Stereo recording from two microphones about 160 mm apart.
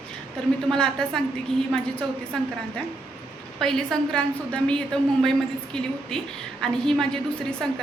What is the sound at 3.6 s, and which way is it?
A woman's voice, 5° left (ahead or behind).